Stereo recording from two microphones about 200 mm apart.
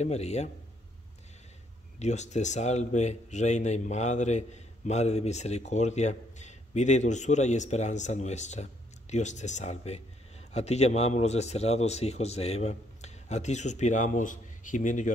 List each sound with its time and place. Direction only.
0.0 s speech: 35° left (ahead or behind)
2.0 s speech: 35° left (ahead or behind)